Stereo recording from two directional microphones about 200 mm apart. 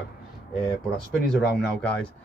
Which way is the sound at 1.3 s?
5° left (ahead or behind).